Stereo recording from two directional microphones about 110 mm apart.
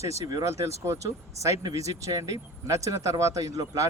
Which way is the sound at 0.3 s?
30° right (ahead or behind).